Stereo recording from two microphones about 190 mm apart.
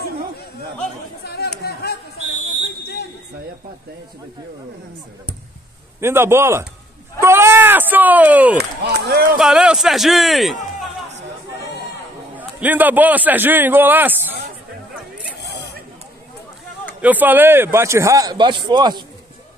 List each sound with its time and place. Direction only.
1.2 s chatter: 60° left (ahead or behind)
1.6 s a sound: 55° left (ahead or behind)
2.1 s a sound: 35° right (ahead or behind)
5.9 s a man's voice: 15° right (ahead or behind)
8.5 s speech: 60° right (ahead or behind)
9.4 s a man's voice: 5° right (ahead or behind)
12.4 s a man's voice: 10° right (ahead or behind)
15.3 s zipper: 60° left (ahead or behind)
17.0 s a man's voice: 10° right (ahead or behind)